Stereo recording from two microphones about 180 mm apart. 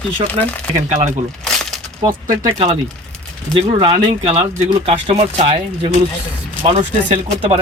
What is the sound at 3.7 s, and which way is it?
Speech, 25° right (ahead or behind).